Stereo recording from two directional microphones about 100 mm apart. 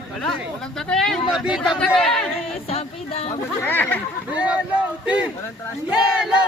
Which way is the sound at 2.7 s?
90° left.